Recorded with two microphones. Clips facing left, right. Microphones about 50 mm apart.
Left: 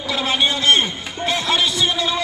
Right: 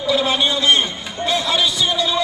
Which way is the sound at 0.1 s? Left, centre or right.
Left.